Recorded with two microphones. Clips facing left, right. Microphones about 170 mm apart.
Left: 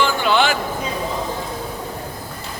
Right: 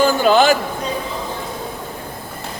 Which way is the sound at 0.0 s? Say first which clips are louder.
Right 5 dB; 40° right (ahead or behind).